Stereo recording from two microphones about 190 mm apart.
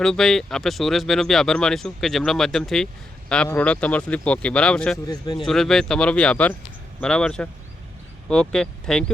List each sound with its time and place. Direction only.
0.0 s speech: centre (ahead or behind)
5.0 s speech: 20° left (ahead or behind)
5.5 s speech: centre (ahead or behind)